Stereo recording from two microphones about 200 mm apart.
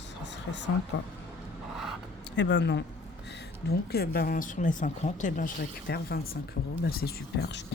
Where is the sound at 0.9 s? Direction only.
65° left (ahead or behind).